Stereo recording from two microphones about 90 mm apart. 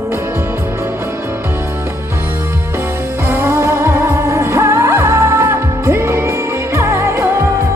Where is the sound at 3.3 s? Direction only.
30° right (ahead or behind).